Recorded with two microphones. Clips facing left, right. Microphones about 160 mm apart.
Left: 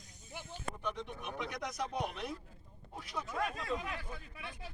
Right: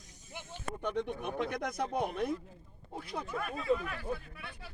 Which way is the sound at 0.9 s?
55° right (ahead or behind).